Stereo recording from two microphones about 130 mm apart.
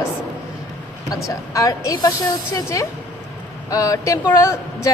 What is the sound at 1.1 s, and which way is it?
Speech, 25° left (ahead or behind).